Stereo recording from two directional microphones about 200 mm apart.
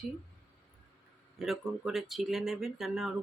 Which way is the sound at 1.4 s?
Centre (ahead or behind).